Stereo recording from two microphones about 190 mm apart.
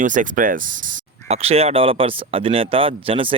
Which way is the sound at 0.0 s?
45° right (ahead or behind).